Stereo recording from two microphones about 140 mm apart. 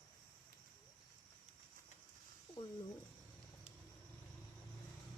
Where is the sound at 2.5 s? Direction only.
35° left (ahead or behind).